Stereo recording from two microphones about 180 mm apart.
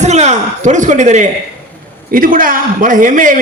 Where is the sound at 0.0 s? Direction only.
40° right (ahead or behind).